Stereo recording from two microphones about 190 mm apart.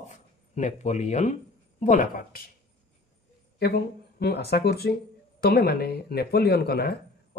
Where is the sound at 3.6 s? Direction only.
55° left (ahead or behind).